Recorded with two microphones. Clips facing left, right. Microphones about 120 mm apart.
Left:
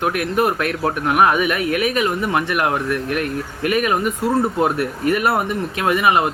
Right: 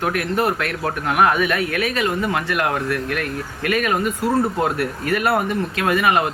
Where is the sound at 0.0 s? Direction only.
15° left (ahead or behind).